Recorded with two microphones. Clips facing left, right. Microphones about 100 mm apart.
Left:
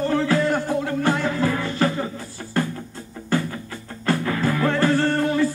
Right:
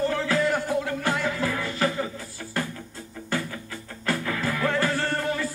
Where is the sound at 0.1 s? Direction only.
30° left (ahead or behind).